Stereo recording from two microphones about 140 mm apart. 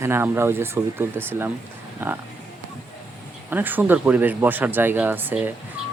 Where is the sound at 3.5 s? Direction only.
15° right (ahead or behind).